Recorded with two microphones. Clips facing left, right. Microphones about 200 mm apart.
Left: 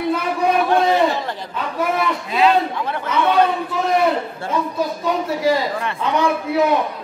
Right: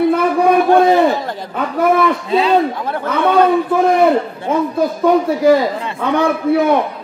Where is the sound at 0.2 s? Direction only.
50° right (ahead or behind).